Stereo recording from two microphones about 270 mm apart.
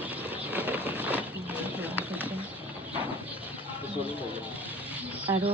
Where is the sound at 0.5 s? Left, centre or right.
Centre.